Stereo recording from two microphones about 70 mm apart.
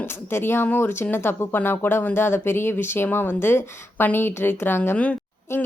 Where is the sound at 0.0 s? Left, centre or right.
Left.